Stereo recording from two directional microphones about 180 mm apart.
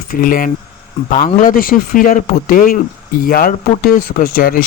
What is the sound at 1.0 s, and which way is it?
Speech, 40° left (ahead or behind).